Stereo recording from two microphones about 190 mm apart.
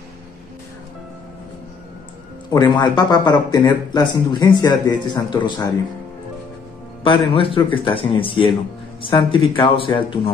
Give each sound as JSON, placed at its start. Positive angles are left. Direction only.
{"t": 2.5, "sound": "speech", "side_deg": 20}
{"t": 7.0, "sound": "speech", "side_deg": 25}